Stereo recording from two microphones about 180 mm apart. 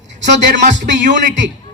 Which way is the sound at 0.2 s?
80° right.